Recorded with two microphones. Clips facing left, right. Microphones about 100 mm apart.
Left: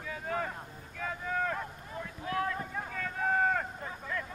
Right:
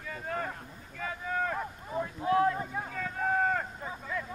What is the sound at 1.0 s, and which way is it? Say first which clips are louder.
Boat: right 1 dB; centre (ahead or behind).